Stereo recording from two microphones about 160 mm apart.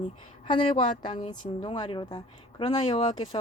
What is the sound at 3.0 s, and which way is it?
Speech, 45° left (ahead or behind).